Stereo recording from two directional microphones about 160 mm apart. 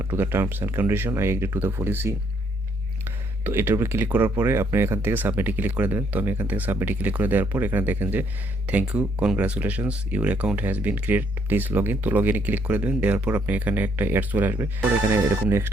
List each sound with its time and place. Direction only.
0.0 s speech: 15° right (ahead or behind)
3.4 s speech: 15° right (ahead or behind)